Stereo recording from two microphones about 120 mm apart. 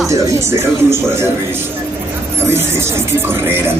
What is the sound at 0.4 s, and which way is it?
Speech, 20° right (ahead or behind).